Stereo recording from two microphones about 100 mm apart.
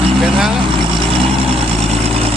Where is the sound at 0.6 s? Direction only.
60° right (ahead or behind); by 2.2 s 80° right.